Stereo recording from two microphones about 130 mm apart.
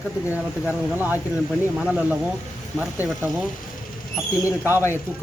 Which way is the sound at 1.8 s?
10° right (ahead or behind).